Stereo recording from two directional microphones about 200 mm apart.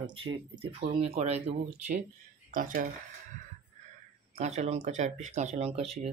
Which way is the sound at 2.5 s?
40° right (ahead or behind).